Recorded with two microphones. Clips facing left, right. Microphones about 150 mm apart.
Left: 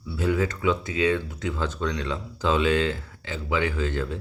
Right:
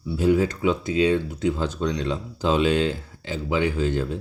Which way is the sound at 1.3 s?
30° right (ahead or behind).